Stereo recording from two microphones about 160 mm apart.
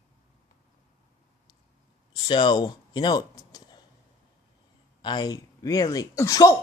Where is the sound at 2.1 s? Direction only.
30° left (ahead or behind).